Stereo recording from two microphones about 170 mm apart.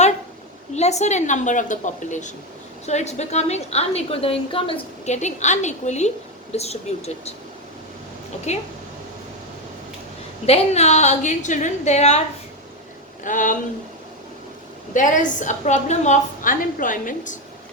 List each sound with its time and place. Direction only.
0.7 s a woman's voice: 40° left (ahead or behind)
8.5 s a woman's voice: 40° left (ahead or behind)
10.4 s a woman's voice: 35° left (ahead or behind)
13.2 s a woman's voice: 50° left (ahead or behind)
14.9 s a woman's voice: 50° left (ahead or behind)